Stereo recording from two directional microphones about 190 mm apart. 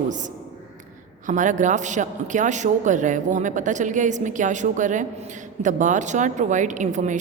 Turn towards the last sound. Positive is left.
turn(degrees=-40)  # may be behind; listen again after turning